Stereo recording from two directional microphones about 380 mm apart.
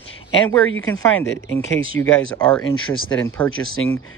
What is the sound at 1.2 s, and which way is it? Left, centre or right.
Speech, left.